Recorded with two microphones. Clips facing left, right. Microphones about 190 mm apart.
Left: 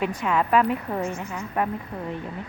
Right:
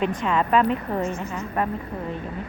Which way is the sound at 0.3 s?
10° left (ahead or behind).